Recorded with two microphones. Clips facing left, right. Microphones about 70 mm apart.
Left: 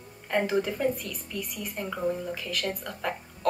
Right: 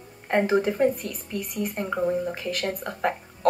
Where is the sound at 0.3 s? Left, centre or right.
Right.